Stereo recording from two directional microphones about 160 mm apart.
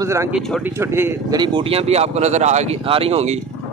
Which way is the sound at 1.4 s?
35° right (ahead or behind).